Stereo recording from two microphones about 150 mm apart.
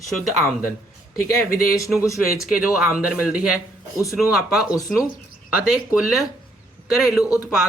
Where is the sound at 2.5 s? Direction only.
5° right (ahead or behind).